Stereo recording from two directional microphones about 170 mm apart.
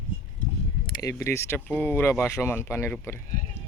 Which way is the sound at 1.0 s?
20° left (ahead or behind).